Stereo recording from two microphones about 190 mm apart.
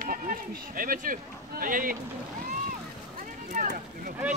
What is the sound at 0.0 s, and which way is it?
Speech, 45° right (ahead or behind).